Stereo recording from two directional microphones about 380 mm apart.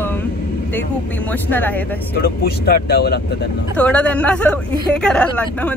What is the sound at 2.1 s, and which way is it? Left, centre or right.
Speech, left.